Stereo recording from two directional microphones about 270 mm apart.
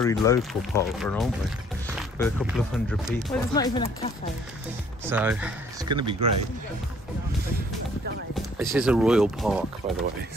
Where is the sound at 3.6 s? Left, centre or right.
Centre.